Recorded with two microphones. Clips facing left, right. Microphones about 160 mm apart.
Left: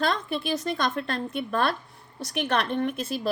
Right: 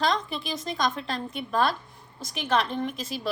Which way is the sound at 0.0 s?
55° left (ahead or behind).